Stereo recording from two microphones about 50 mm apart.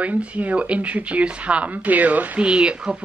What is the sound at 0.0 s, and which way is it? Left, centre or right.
Speech, right.